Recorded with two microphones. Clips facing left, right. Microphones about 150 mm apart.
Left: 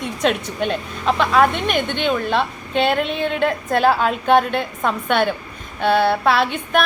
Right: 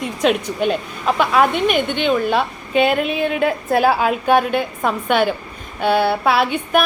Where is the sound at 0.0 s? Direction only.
5° right (ahead or behind).